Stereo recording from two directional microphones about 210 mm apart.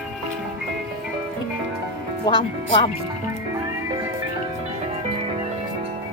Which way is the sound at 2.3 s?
25° left (ahead or behind).